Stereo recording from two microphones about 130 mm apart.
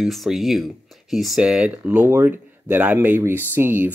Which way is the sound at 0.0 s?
Centre (ahead or behind).